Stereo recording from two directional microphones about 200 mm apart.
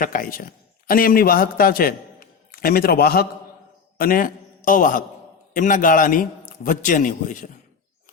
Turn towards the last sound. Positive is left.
turn(degrees=40)  # may be behind; listen again after turning